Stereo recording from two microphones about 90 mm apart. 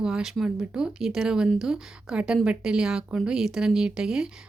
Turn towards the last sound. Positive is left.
turn(degrees=-5)  # may be behind; listen again after turning